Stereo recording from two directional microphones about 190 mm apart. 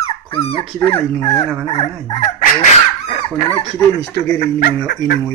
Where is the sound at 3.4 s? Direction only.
10° left (ahead or behind).